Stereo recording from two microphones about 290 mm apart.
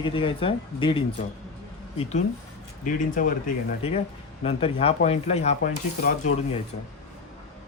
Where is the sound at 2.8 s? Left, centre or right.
Left.